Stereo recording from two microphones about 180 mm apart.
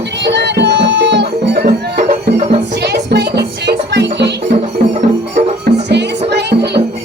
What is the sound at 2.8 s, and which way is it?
Music, 65° right (ahead or behind).